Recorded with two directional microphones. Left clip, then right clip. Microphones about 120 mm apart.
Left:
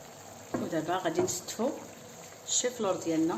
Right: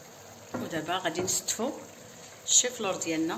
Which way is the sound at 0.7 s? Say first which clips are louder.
Even; 35° left (ahead or behind).